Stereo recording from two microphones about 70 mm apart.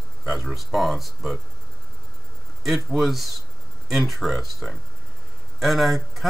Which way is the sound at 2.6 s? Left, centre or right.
Centre.